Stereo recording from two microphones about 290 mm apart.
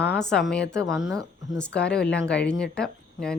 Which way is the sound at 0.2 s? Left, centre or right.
Centre.